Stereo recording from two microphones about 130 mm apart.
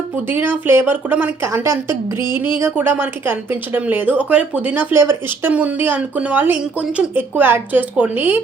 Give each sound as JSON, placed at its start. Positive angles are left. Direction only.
{"t": 0.3, "sound": "a woman's voice", "side_deg": -15}